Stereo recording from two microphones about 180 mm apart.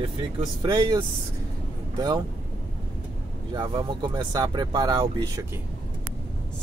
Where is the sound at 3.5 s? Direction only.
25° right (ahead or behind).